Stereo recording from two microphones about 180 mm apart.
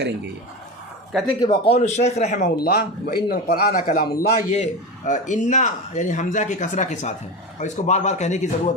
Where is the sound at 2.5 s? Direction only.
60° left (ahead or behind).